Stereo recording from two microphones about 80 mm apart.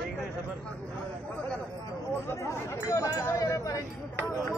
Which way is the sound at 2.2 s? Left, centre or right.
Left.